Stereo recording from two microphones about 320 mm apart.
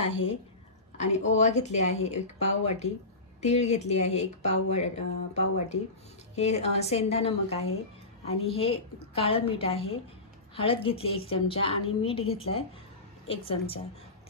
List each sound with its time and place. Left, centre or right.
0.9 s a woman's voice: left